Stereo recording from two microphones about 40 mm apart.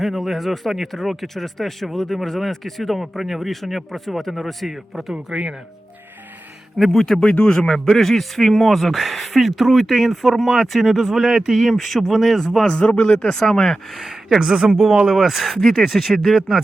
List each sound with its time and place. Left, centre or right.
0.0 s speech: centre
5.1 s speech: right
6.7 s speech: centre
7.0 s a man's voice: centre
7.9 s speech: centre
11.3 s a man's voice: centre
12.6 s speech: left; by 13.7 s centre
13.9 s speech: centre